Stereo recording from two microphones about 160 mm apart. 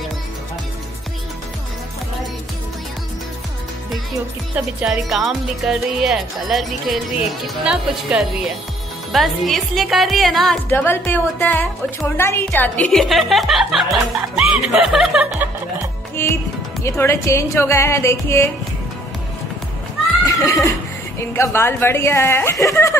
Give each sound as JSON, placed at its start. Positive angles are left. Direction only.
{"t": 4.6, "sound": "speech", "side_deg": -5}
{"t": 10.7, "sound": "a woman's voice", "side_deg": 15}
{"t": 16.2, "sound": "a woman's voice", "side_deg": 15}
{"t": 20.2, "sound": "a woman's voice", "side_deg": 20}